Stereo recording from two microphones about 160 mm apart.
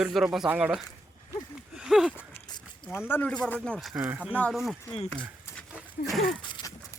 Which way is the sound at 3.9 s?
10° right (ahead or behind).